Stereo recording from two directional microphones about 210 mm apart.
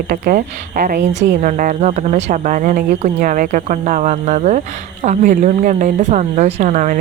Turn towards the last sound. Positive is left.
turn(degrees=-35)  # may be behind; listen again after turning